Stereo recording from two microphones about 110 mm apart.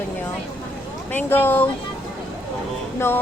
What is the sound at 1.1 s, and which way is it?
Speech, 15° left (ahead or behind).